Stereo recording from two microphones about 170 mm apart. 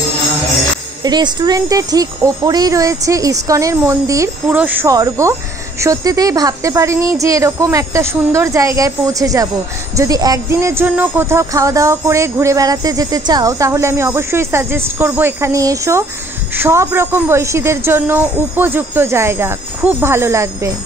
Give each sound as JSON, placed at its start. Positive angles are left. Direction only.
{"t": 1.0, "sound": "speech", "side_deg": -25}
{"t": 4.8, "sound": "speech", "side_deg": -20}